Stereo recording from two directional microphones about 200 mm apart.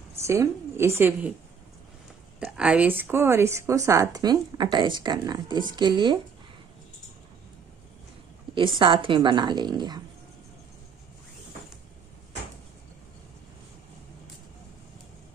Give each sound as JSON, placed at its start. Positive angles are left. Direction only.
{"t": 0.2, "sound": "speech", "side_deg": -15}
{"t": 2.4, "sound": "speech", "side_deg": -5}
{"t": 8.5, "sound": "a woman's voice", "side_deg": -25}